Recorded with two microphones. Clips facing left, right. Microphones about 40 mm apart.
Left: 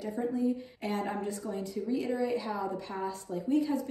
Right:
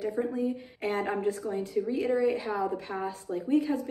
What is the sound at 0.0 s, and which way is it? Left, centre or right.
A woman's voice, right.